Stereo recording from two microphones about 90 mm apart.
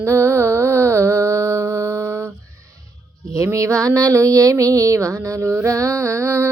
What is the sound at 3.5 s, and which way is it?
Music, 35° right (ahead or behind).